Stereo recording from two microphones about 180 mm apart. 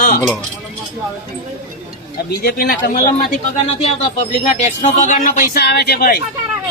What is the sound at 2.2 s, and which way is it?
Speech, 60° left (ahead or behind).